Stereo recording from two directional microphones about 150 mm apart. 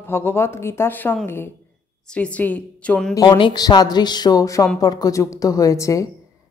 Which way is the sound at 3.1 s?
30° left (ahead or behind).